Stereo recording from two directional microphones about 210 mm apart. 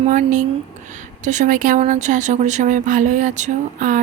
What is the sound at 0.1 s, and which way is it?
Speech, 35° right (ahead or behind).